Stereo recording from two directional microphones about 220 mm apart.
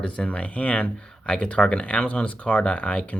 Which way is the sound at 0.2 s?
5° left (ahead or behind).